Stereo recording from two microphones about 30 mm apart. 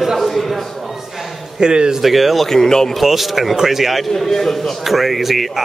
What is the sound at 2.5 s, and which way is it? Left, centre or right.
Speech, centre.